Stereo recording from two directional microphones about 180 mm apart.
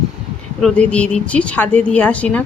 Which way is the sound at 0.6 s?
5° left (ahead or behind).